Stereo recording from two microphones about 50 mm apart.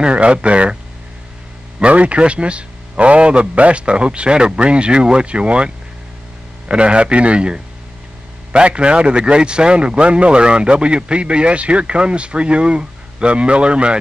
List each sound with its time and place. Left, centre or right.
0.0 s a man's voice: right
1.8 s a man's voice: right
6.7 s a man's voice: right